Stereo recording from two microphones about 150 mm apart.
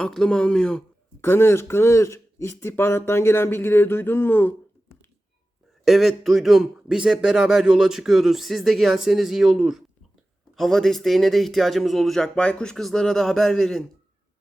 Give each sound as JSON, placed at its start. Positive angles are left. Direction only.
{"t": 0.0, "sound": "speech", "side_deg": 5}
{"t": 1.2, "sound": "speech", "side_deg": 15}
{"t": 5.8, "sound": "speech", "side_deg": 0}